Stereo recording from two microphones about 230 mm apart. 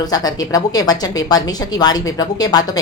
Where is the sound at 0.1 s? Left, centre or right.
Centre.